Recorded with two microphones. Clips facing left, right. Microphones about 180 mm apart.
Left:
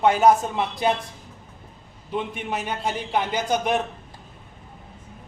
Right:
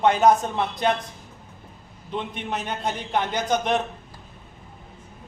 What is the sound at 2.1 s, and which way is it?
A man's voice, 10° left (ahead or behind).